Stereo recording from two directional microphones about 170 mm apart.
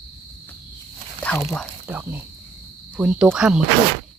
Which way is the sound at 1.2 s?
10° left (ahead or behind).